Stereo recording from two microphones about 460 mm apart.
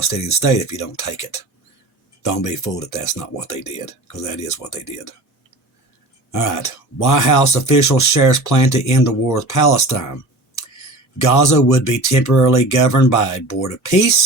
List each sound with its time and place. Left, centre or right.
0.2 s speech: centre
2.2 s speech: left
6.3 s speech: left
11.2 s speech: left